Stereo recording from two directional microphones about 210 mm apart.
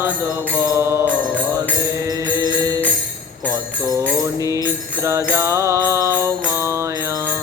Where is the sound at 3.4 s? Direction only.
15° right (ahead or behind).